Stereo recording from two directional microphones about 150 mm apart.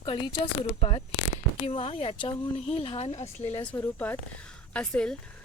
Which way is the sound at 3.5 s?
15° left (ahead or behind).